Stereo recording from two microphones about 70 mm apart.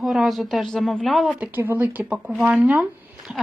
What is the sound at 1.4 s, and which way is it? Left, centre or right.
Speech, right.